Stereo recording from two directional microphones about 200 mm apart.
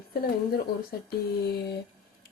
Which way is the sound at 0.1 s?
50° left (ahead or behind).